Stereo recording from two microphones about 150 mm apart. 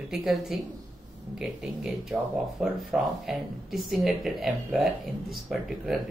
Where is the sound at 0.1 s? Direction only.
Centre (ahead or behind).